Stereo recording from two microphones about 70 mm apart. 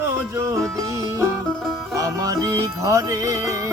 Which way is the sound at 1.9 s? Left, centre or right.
Right.